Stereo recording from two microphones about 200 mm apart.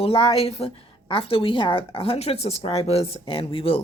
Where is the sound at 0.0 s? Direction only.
30° left (ahead or behind).